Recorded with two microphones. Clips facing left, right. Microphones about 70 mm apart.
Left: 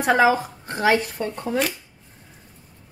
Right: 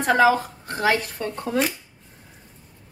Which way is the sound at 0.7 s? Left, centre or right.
Left.